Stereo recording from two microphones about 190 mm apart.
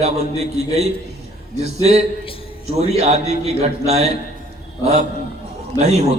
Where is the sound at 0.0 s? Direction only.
35° right (ahead or behind).